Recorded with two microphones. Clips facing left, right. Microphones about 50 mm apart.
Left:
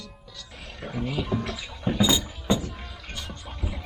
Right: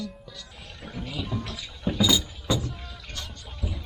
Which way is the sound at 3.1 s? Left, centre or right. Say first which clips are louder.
Left 2 dB; centre.